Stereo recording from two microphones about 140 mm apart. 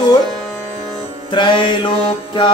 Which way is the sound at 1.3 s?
35° left (ahead or behind).